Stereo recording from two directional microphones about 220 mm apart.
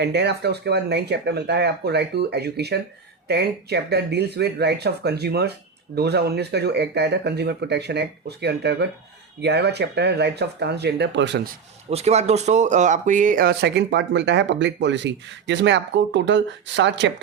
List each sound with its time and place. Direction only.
0.0 s speech: 50° right (ahead or behind)
11.9 s speech: 30° right (ahead or behind); by 17.1 s 55° right (ahead or behind)